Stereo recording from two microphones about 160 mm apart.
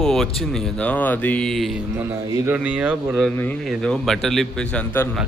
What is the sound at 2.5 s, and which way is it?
Speech, 10° right (ahead or behind).